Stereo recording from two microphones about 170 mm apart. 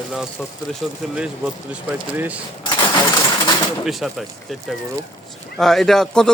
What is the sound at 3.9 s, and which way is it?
Speech, centre (ahead or behind).